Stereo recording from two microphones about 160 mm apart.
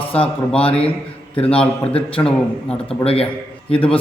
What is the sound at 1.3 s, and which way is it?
Speech, 35° left (ahead or behind).